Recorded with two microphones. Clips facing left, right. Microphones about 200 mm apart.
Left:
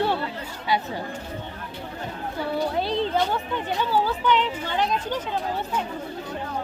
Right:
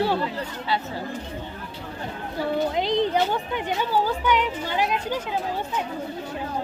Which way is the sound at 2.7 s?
15° right (ahead or behind).